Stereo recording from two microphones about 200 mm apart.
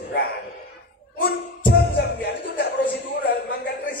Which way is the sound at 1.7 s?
55° left (ahead or behind).